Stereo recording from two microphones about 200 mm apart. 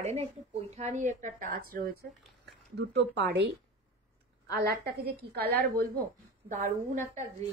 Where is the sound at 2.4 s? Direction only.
55° right (ahead or behind).